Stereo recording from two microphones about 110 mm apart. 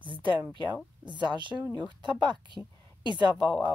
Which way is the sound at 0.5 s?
45° right (ahead or behind).